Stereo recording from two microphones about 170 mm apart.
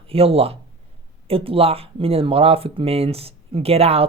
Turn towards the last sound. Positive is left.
turn(degrees=-35)  # may be behind; listen again after turning